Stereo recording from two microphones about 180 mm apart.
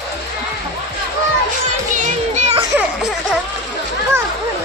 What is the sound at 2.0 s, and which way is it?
Music, 40° right (ahead or behind).